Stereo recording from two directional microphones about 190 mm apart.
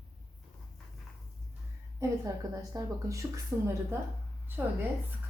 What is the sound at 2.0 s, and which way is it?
A woman's voice, 20° right (ahead or behind).